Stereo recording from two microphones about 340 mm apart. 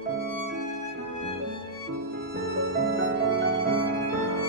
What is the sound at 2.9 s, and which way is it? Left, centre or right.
Music, right.